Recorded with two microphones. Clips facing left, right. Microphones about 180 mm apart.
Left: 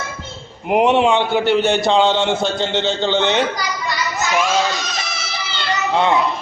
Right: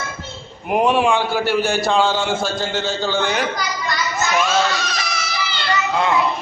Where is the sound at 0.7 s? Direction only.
20° left (ahead or behind).